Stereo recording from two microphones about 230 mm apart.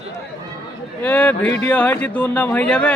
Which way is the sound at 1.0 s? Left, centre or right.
Centre.